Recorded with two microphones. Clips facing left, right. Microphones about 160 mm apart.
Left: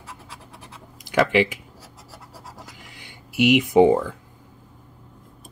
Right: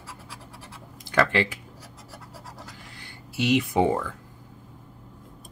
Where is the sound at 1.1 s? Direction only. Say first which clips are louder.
Left 4 dB; 15° left (ahead or behind).